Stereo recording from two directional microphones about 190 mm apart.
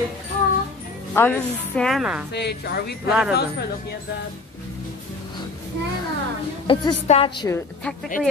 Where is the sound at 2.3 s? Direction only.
60° left (ahead or behind).